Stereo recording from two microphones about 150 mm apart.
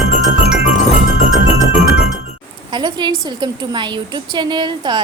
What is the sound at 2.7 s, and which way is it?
A woman's voice, 30° right (ahead or behind).